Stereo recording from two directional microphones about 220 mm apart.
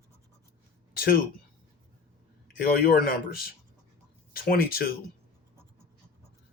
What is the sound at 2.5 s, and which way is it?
Speech, 40° left (ahead or behind).